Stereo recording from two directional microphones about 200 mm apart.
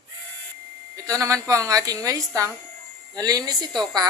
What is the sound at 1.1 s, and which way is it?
Speech, 15° right (ahead or behind).